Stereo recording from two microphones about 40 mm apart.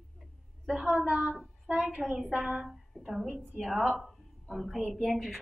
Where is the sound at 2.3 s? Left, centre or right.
Right.